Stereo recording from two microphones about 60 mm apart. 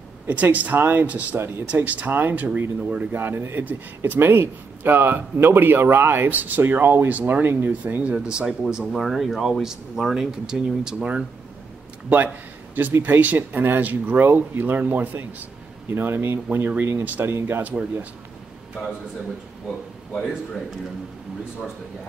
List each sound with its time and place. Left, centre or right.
0.3 s speech: right
3.1 s speech: right
7.1 s speech: right
8.3 s speech: centre
13.0 s speech: right